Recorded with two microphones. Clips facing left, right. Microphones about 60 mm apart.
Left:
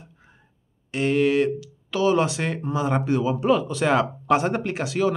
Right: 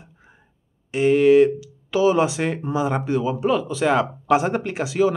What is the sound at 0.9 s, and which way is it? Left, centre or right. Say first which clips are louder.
Speech: right 6 dB; centre.